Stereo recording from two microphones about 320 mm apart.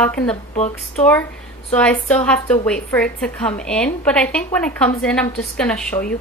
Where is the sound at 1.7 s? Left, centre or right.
Centre.